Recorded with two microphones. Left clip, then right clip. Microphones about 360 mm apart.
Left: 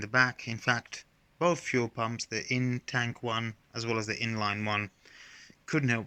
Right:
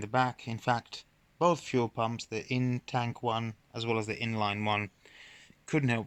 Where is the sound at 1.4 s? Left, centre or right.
Centre.